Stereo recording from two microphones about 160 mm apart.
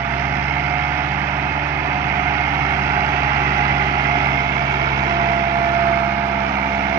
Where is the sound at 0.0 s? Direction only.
15° right (ahead or behind).